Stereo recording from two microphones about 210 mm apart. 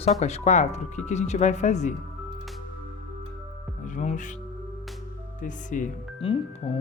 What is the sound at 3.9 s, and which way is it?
Speech, 35° left (ahead or behind).